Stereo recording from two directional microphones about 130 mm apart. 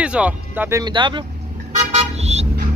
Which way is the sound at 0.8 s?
35° right (ahead or behind).